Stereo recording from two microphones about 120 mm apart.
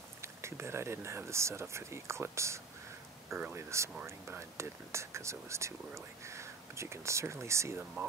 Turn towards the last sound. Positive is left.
turn(degrees=-25)  # may be behind; listen again after turning